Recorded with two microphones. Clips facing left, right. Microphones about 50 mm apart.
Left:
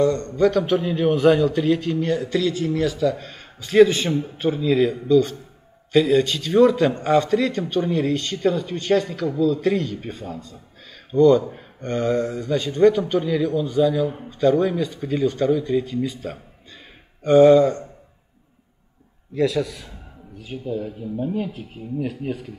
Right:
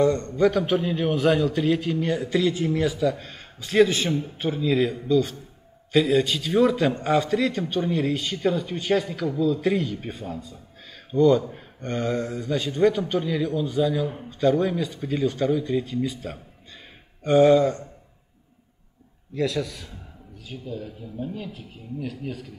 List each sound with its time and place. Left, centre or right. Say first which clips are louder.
0.0 s a man's voice: left 1 dB; centre
0.4 s a man's voice: left 3 dB; centre
19.3 s a man's voice: left 5 dB; centre
20.4 s speech: left 7 dB; left